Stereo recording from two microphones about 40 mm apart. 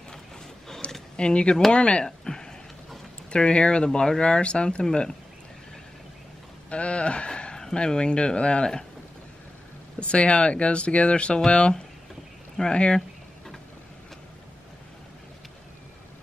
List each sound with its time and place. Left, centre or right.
1.1 s speech: left
2.0 s a sound: centre
3.3 s speech: left
6.7 s speech: left
9.9 s speech: left